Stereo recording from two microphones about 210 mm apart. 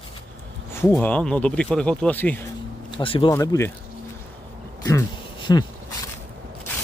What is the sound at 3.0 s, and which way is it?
Speech, 25° left (ahead or behind).